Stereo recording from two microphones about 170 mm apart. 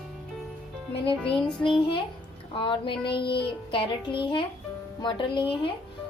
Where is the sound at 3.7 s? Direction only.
30° left (ahead or behind).